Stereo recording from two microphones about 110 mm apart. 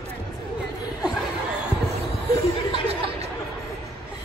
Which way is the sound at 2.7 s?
65° right (ahead or behind).